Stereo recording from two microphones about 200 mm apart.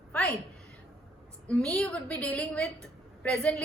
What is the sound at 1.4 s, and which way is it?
A woman's voice, 5° left (ahead or behind).